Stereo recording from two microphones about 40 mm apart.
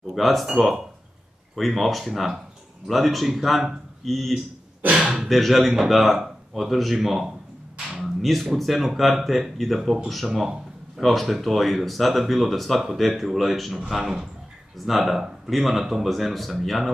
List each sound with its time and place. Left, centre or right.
0.1 s speech: centre
5.0 s speech: right
5.3 s speech: centre
8.0 s a sound: centre
8.5 s speech: centre